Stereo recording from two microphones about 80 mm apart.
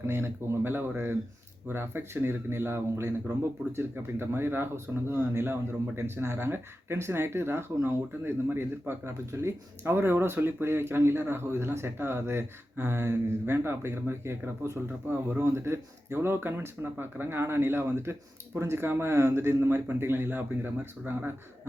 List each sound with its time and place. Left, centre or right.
0.1 s speech: right